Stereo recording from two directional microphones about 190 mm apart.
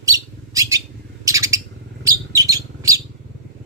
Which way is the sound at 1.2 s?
15° right (ahead or behind).